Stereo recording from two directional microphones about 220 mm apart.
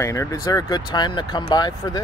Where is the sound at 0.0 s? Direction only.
15° left (ahead or behind).